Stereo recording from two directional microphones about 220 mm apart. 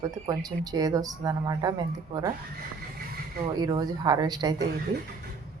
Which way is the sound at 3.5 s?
20° right (ahead or behind).